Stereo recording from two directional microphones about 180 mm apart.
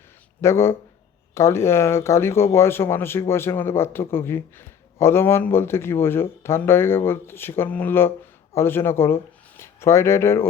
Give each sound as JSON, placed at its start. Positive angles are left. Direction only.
{"t": 0.4, "sound": "speech", "side_deg": 15}